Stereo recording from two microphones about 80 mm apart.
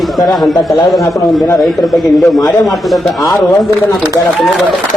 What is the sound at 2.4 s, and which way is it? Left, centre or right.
Speech, left.